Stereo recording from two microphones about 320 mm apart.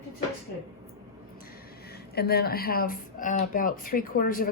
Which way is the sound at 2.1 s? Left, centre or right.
Left.